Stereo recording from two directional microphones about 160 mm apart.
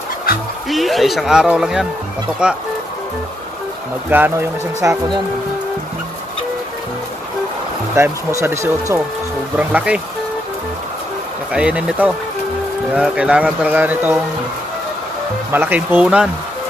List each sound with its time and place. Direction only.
0.7 s speech: centre (ahead or behind)
4.1 s speech: 10° right (ahead or behind)
7.9 s speech: 15° right (ahead or behind)
11.5 s speech: 5° right (ahead or behind)
15.5 s speech: 10° right (ahead or behind)